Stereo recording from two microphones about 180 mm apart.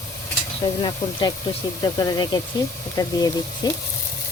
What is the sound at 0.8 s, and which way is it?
Speech, 25° left (ahead or behind).